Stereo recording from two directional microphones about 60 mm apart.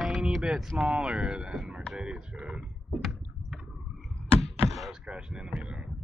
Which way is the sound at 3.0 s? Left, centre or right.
Centre.